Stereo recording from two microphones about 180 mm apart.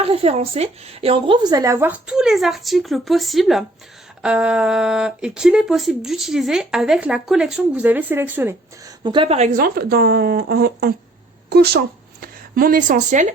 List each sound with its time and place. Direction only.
0.0 s a woman's voice: 35° right (ahead or behind); by 8.9 s 10° right (ahead or behind)
9.0 s a woman's voice: 25° right (ahead or behind)
9.5 s a woman's voice: 55° right (ahead or behind)